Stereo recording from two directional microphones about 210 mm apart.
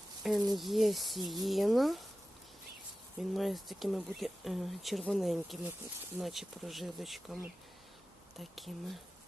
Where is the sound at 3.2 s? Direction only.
Centre (ahead or behind).